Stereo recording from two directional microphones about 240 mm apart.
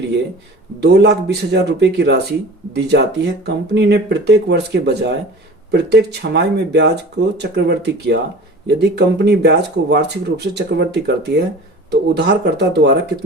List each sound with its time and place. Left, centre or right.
0.8 s speech: right